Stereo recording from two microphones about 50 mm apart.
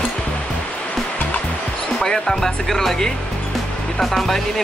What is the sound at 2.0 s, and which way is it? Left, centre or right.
Speech, centre.